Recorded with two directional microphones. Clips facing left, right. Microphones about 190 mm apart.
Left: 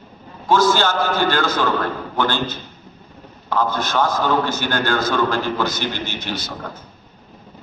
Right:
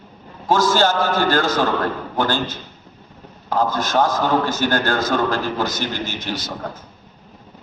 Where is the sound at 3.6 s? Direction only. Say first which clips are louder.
Right 1 dB; 40° right (ahead or behind).